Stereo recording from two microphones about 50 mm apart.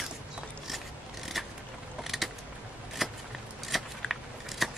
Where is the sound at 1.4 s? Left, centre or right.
Centre.